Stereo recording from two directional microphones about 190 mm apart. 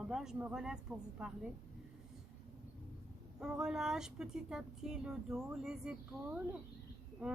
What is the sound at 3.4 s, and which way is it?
Speech, 5° right (ahead or behind).